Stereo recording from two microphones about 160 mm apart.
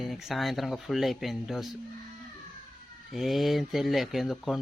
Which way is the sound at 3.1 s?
Centre (ahead or behind).